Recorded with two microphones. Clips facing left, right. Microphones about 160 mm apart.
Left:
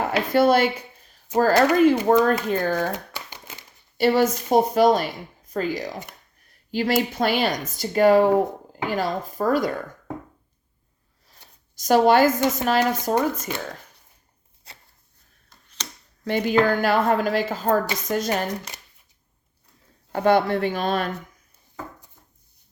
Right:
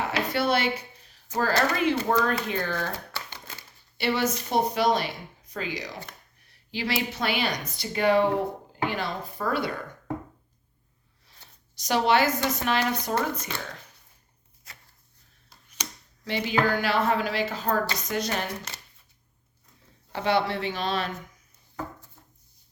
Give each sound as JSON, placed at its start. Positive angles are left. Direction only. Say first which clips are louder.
{"t": 0.0, "sound": "a sound", "louder": "left 7 dB", "side_deg": 50}
{"t": 1.4, "sound": "speech", "louder": "left 8 dB", "side_deg": 45}
{"t": 2.9, "sound": "crumpling", "louder": "left 4 dB", "side_deg": 15}
{"t": 3.9, "sound": "speech", "louder": "left 7 dB", "side_deg": 45}
{"t": 11.8, "sound": "speech", "louder": "left 6 dB", "side_deg": 45}
{"t": 14.7, "sound": "chopping", "louder": "left 3 dB", "side_deg": 30}
{"t": 15.8, "sound": "a sound", "louder": "even", "side_deg": -10}
{"t": 16.2, "sound": "speech", "louder": "left 6 dB", "side_deg": 50}
{"t": 20.1, "sound": "speech", "louder": "left 6 dB", "side_deg": 50}